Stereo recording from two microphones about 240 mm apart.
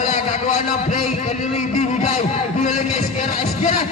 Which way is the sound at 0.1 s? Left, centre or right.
Left.